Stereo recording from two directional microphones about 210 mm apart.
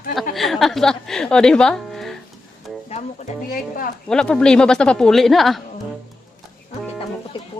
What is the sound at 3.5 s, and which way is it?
Speech, 40° left (ahead or behind).